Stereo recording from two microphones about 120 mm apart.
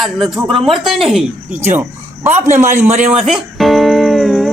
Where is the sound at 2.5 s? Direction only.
75° right (ahead or behind).